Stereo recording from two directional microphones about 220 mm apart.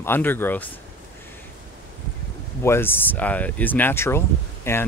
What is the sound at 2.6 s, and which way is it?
Speech, 10° left (ahead or behind).